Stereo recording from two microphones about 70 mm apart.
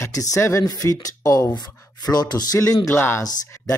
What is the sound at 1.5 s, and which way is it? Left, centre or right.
Speech, left.